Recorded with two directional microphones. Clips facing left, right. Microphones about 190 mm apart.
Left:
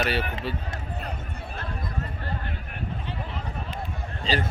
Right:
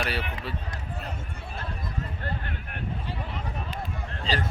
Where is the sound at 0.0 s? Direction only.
Centre (ahead or behind).